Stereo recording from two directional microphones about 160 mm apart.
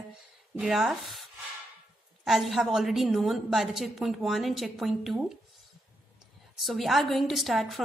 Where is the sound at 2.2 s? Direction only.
Centre (ahead or behind).